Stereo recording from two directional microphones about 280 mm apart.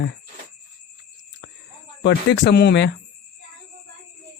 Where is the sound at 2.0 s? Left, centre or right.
Left.